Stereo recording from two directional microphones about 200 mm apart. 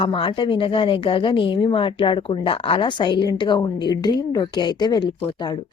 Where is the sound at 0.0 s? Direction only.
25° left (ahead or behind).